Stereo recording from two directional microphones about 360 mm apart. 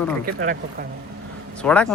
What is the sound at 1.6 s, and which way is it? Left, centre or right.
Speech, centre.